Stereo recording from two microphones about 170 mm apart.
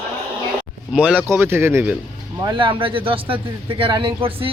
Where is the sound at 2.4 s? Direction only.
30° right (ahead or behind).